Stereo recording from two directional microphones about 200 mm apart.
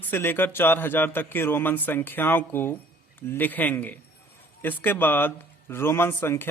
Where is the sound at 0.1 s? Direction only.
10° left (ahead or behind).